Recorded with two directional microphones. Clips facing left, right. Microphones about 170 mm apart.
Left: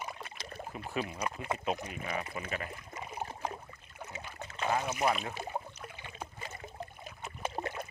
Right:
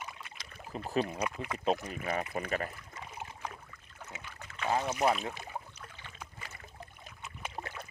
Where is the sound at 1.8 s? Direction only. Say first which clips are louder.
Right 3 dB; 45° right (ahead or behind).